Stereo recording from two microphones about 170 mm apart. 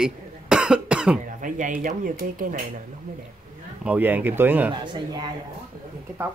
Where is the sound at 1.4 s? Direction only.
50° right (ahead or behind).